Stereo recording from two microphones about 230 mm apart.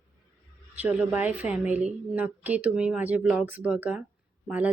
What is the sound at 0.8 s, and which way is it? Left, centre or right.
A woman's voice, centre.